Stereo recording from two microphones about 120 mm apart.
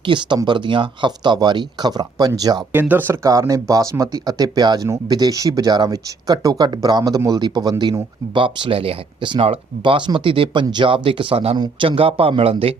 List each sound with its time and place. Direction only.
0.0 s speech: 40° right (ahead or behind)
2.7 s speech: 15° right (ahead or behind)
3.2 s speech: 30° right (ahead or behind); by 12.7 s 50° right (ahead or behind)